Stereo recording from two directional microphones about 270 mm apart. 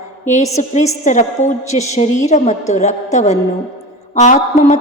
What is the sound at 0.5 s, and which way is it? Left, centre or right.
A woman's voice, left.